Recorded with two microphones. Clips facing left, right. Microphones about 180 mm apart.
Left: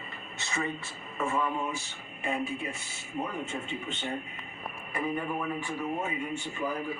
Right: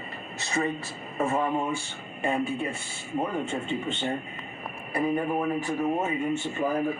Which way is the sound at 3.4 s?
30° right (ahead or behind).